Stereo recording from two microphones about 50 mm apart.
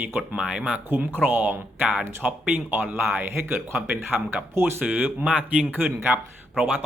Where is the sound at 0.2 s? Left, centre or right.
Right.